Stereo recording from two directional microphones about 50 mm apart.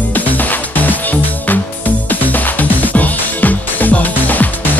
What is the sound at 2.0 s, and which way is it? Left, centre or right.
Music, left.